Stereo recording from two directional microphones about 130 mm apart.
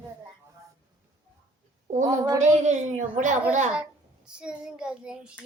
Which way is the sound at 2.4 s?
65° right (ahead or behind).